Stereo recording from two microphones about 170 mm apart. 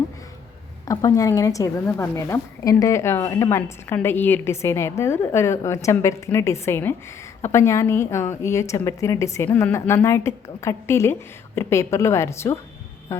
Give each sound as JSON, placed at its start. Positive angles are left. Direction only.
{"t": 0.9, "sound": "a woman's voice", "side_deg": 20}